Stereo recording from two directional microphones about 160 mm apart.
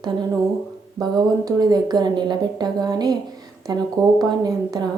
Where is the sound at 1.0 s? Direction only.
25° right (ahead or behind).